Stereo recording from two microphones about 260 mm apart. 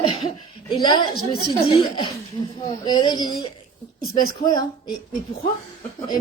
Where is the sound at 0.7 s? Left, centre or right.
Centre.